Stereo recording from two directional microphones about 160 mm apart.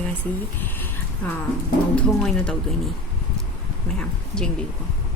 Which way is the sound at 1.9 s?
Centre (ahead or behind).